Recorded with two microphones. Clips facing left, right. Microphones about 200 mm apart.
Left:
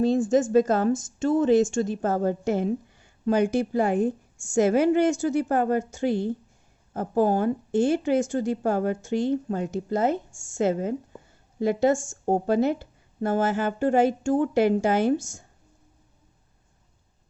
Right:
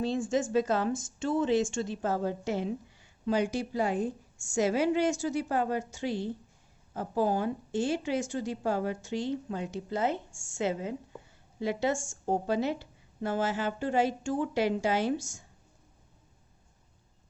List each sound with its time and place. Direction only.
0.0 s a woman's voice: 45° left (ahead or behind)